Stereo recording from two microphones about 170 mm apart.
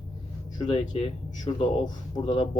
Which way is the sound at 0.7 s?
35° left (ahead or behind).